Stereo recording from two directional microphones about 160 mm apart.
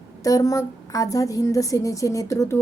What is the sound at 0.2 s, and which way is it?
A woman's voice, 20° left (ahead or behind).